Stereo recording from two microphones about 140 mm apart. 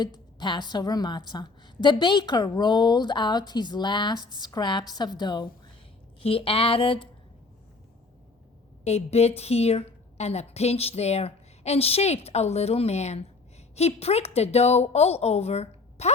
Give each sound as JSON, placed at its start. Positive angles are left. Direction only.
{"t": 0.0, "sound": "a woman's voice", "side_deg": 30}
{"t": 6.1, "sound": "a woman's voice", "side_deg": 40}
{"t": 8.8, "sound": "a woman's voice", "side_deg": 50}